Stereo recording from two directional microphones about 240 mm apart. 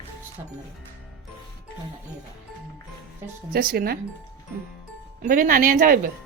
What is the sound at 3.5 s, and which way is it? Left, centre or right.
Speech, right.